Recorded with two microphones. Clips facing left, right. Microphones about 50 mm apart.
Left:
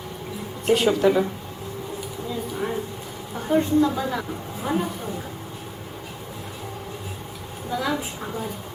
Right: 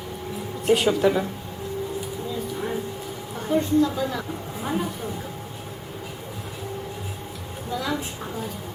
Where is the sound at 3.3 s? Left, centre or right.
Centre.